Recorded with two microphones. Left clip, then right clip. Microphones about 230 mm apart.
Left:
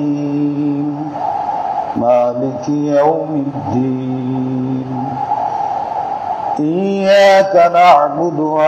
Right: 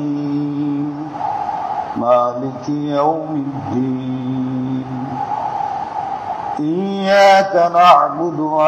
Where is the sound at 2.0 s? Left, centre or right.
Left.